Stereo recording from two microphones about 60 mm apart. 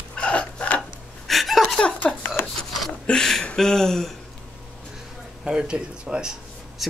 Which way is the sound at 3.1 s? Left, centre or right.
Centre.